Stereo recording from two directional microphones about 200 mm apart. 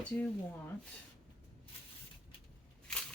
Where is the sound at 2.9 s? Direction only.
5° left (ahead or behind).